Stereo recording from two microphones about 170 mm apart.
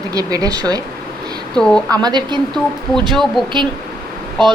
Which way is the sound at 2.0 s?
25° right (ahead or behind).